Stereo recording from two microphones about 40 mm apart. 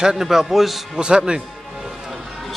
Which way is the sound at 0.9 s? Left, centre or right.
Right.